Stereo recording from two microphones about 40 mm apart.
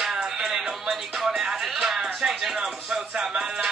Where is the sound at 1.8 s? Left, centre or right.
Centre.